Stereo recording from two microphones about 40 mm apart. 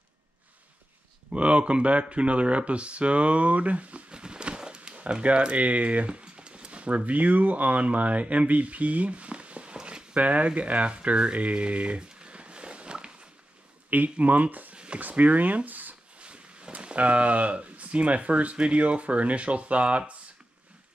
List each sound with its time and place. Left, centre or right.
1.3 s speech: right
4.1 s a sound: right
7.1 s speech: right
9.8 s a sound: centre
10.1 s speech: right
13.8 s speech: right
16.2 s speech: right